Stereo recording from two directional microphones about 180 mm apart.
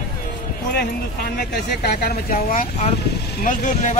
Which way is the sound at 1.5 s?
65° left (ahead or behind).